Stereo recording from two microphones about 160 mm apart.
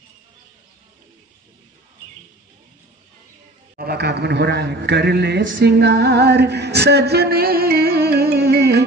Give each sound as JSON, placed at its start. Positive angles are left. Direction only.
{"t": 3.7, "sound": "a man's voice", "side_deg": -80}